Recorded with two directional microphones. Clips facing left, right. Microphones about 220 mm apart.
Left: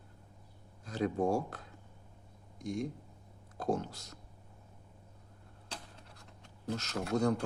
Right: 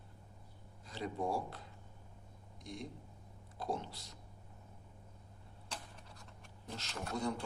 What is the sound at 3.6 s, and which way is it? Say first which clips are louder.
Speech: left 7 dB; 45° left (ahead or behind).